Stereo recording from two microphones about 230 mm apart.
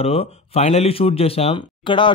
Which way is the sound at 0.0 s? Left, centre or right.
Left.